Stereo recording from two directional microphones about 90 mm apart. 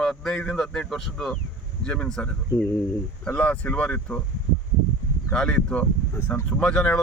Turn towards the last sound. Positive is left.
turn(degrees=10)  # may be behind; listen again after turning